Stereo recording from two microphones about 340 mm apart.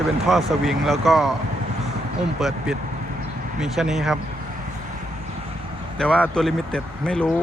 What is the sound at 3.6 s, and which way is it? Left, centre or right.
Speech, centre.